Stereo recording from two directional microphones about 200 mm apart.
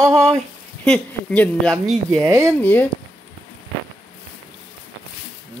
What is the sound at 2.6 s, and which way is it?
Speech, 10° left (ahead or behind).